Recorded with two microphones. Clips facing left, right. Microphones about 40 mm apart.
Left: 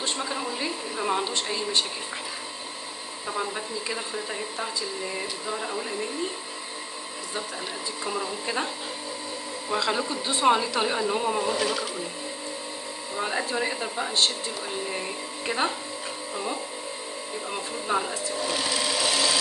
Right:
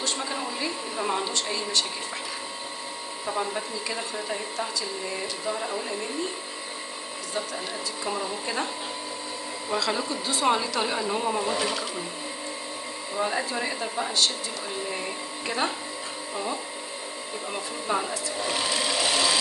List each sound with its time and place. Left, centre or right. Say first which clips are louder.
0.2 s a sound: even; centre
3.3 s speech: right 1 dB; centre
5.5 s speech: right 1 dB; centre
8.0 s speech: even; centre
9.8 s speech: left 1 dB; centre
13.2 s speech: even; centre
15.4 s speech: left 1 dB; centre
17.5 s speech: even; centre
18.4 s sewing machine: even; centre